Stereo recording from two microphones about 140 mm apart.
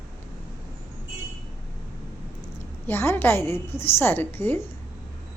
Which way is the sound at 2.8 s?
15° left (ahead or behind).